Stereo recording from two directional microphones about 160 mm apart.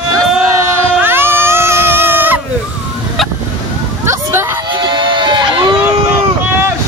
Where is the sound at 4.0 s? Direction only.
15° right (ahead or behind).